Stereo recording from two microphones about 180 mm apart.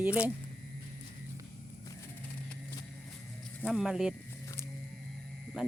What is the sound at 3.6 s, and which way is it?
Speech, centre (ahead or behind).